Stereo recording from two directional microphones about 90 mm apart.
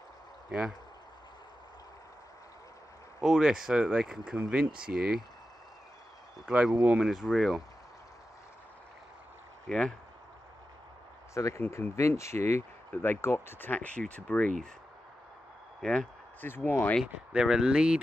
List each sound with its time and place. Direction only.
0.5 s speech: 5° right (ahead or behind)
3.2 s speech: 5° right (ahead or behind)
4.9 s speech: 15° right (ahead or behind)
6.4 s speech: 10° right (ahead or behind)
9.7 s speech: 10° left (ahead or behind)
11.3 s speech: 35° left (ahead or behind)
11.6 s speech: 20° left (ahead or behind)
11.9 s speech: 30° left (ahead or behind); by 14.7 s 15° left (ahead or behind)
15.8 s speech: 10° left (ahead or behind)
16.3 s speech: 25° left (ahead or behind)
17.0 s speech: 10° right (ahead or behind)